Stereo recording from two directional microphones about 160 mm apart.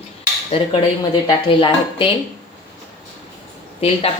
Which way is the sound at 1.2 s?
30° left (ahead or behind).